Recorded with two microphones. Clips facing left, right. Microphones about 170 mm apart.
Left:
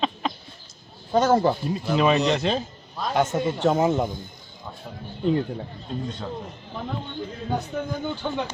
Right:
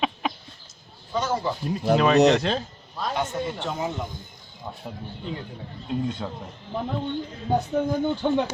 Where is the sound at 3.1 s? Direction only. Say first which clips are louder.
Left 6 dB; 45° left (ahead or behind).